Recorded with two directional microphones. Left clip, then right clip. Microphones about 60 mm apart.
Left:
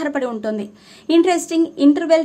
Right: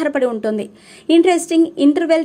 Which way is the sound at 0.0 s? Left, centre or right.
Right.